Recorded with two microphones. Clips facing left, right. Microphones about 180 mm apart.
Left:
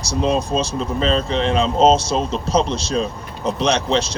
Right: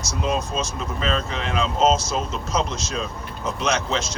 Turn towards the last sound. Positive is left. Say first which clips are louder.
# left 5 dB
turn(degrees=30)  # may be behind; listen again after turning